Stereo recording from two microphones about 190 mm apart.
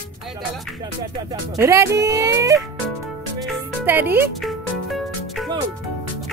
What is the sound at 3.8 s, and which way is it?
Speech, 10° right (ahead or behind).